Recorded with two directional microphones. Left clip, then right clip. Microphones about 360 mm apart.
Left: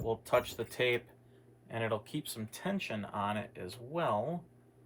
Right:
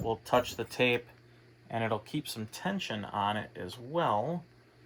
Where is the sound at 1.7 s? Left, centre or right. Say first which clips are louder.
Right 3 dB; right.